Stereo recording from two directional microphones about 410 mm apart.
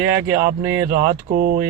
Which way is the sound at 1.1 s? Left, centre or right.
Centre.